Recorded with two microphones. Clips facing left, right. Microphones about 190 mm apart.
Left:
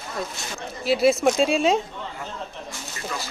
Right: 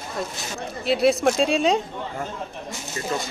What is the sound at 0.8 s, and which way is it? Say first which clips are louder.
Speech: even; centre (ahead or behind).